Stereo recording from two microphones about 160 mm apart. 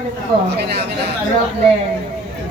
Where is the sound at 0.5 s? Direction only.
90° right.